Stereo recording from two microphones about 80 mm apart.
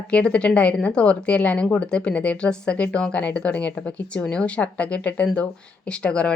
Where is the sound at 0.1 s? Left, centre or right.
Centre.